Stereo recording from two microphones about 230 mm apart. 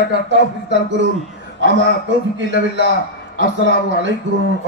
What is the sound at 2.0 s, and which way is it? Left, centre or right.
Speech, right.